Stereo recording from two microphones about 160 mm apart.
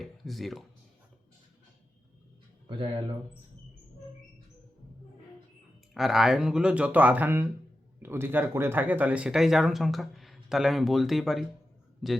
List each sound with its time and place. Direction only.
0.0 s speech: centre (ahead or behind)
2.6 s speech: 30° right (ahead or behind)
5.9 s speech: centre (ahead or behind)